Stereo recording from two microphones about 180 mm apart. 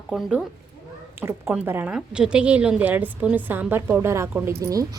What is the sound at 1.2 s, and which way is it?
A woman's voice, 15° right (ahead or behind).